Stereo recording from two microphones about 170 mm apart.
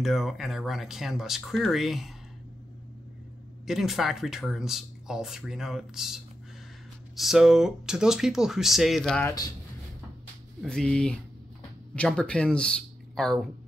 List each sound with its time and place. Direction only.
0.0 s speech: centre (ahead or behind)
3.6 s speech: centre (ahead or behind)
9.2 s speech: 20° left (ahead or behind)
10.6 s speech: 5° left (ahead or behind)